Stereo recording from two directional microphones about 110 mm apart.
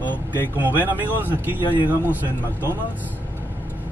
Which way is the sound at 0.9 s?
15° right (ahead or behind).